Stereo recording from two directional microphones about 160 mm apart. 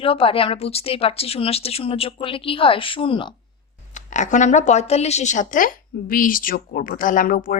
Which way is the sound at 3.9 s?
50° left (ahead or behind).